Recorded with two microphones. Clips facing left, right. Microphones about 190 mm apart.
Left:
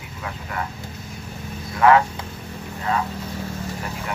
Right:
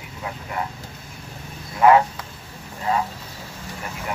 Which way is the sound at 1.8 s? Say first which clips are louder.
Right 1 dB; 20° right (ahead or behind).